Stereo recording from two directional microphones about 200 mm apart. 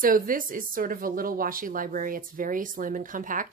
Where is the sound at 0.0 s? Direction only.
45° right (ahead or behind).